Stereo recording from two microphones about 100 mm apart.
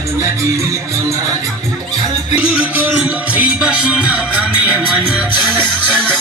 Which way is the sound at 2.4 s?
10° right (ahead or behind).